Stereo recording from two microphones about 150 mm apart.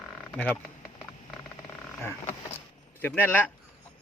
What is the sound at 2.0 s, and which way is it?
Speech, 15° left (ahead or behind).